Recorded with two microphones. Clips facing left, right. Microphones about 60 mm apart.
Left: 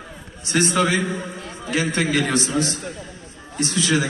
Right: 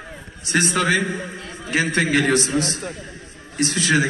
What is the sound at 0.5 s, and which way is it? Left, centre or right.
A man's voice, right.